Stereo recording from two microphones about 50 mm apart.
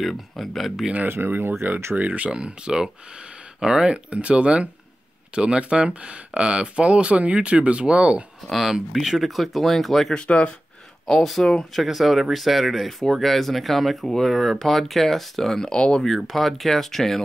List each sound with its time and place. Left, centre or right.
0.0 s speech: centre
1.0 s speech: right
2.0 s speech: right
8.5 s speech: centre
10.1 s speech: left
11.1 s speech: centre
15.7 s speech: centre
16.3 s speech: centre